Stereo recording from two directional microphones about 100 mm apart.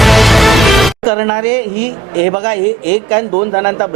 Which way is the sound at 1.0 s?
25° right (ahead or behind).